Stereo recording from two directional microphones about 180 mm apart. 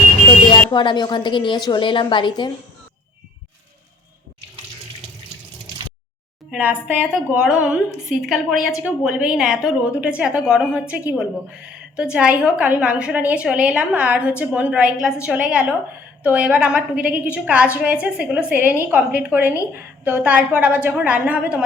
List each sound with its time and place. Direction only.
0.7 s a woman's voice: 25° left (ahead or behind)
6.5 s a woman's voice: 10° right (ahead or behind)